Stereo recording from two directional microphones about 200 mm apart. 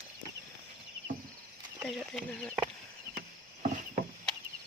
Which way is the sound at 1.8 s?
Centre (ahead or behind).